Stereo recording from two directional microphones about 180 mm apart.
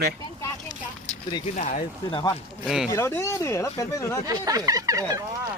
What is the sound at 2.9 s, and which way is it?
Speech, 15° left (ahead or behind).